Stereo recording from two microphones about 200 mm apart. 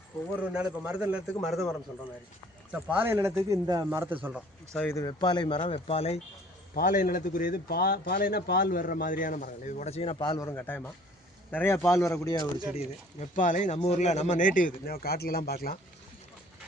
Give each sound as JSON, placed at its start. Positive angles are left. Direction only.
{"t": 0.4, "sound": "a man's voice", "side_deg": -5}
{"t": 3.0, "sound": "a man's voice", "side_deg": -10}
{"t": 4.7, "sound": "a man's voice", "side_deg": 5}
{"t": 4.9, "sound": "speech", "side_deg": 20}
{"t": 6.7, "sound": "a man's voice", "side_deg": 40}
{"t": 12.7, "sound": "a man's voice", "side_deg": 35}